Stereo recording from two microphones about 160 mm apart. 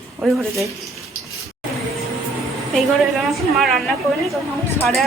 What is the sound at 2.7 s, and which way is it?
A woman's voice, centre (ahead or behind).